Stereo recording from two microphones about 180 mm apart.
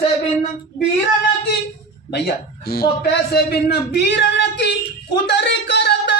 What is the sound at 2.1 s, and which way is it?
A man's voice, 60° left (ahead or behind).